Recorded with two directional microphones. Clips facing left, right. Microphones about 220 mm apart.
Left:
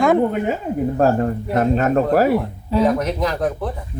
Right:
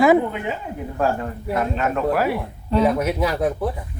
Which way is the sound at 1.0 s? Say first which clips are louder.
Left 4 dB; 40° left (ahead or behind).